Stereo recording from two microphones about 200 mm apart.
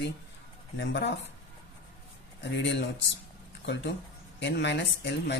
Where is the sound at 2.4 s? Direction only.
60° left (ahead or behind).